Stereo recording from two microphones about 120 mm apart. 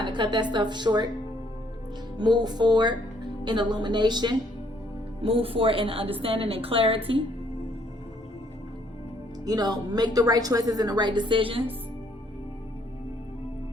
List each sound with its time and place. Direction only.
0.0 s a woman's voice: 40° right (ahead or behind)
2.1 s a woman's voice: 35° right (ahead or behind)
5.2 s a woman's voice: 50° right (ahead or behind)
9.5 s a woman's voice: 35° right (ahead or behind)